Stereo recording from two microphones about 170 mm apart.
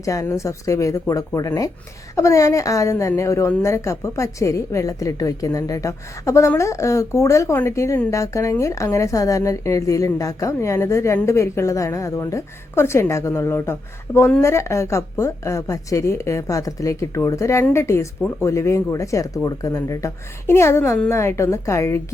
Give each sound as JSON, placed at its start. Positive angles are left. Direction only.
{"t": 0.0, "sound": "a woman's voice", "side_deg": 20}